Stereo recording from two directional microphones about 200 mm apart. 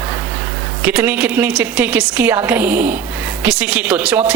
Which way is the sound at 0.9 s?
5° right (ahead or behind).